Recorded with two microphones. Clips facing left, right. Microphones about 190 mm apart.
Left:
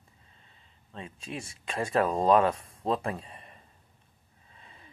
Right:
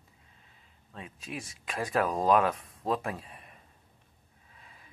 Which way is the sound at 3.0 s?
Centre (ahead or behind).